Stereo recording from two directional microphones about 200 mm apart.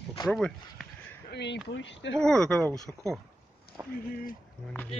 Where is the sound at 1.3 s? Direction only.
60° left (ahead or behind).